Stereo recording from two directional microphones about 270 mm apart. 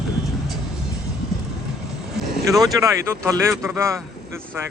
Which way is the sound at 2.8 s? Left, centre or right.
Centre.